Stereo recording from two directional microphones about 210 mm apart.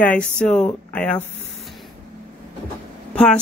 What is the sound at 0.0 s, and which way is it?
Speech, 5° left (ahead or behind).